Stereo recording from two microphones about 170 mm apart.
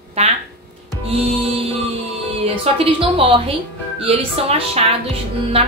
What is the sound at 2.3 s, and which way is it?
Speech, 35° right (ahead or behind).